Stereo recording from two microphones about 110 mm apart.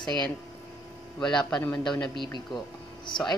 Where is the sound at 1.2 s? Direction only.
5° left (ahead or behind).